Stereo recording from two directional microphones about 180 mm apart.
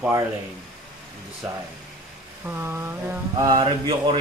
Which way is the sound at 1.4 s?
5° right (ahead or behind).